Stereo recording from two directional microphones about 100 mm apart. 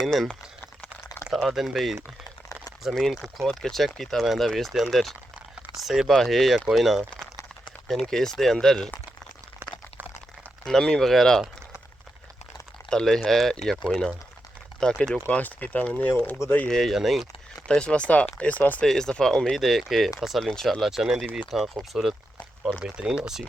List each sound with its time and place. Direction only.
0.0 s speech: centre (ahead or behind)
1.3 s speech: 5° right (ahead or behind)
10.7 s speech: 5° left (ahead or behind)
12.9 s speech: 5° left (ahead or behind); by 16.6 s 20° left (ahead or behind)
16.6 s speech: 5° left (ahead or behind)
17.7 s speech: 10° left (ahead or behind); by 23.4 s 5° right (ahead or behind)